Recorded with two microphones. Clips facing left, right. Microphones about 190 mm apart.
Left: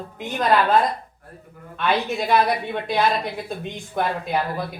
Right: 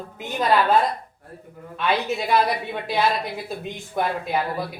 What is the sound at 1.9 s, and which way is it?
Speech, centre (ahead or behind).